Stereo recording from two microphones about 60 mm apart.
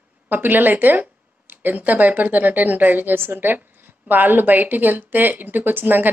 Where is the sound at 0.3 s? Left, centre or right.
Right.